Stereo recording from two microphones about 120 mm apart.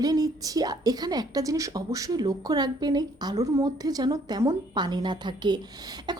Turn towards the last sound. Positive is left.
turn(degrees=-35)  # may be behind; listen again after turning